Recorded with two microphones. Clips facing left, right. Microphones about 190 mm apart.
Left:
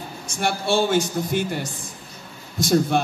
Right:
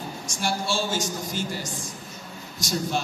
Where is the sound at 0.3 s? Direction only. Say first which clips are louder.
Left 6 dB; 60° left (ahead or behind).